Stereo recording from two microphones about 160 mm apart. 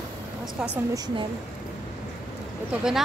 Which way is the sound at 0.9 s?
25° right (ahead or behind).